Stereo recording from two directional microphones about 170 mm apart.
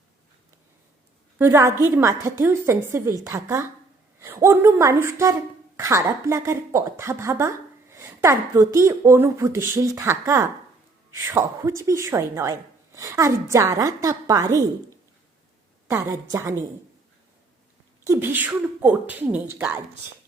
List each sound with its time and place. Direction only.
1.4 s a woman's voice: 15° right (ahead or behind)
15.9 s a woman's voice: 20° right (ahead or behind)
18.0 s a woman's voice: 15° right (ahead or behind)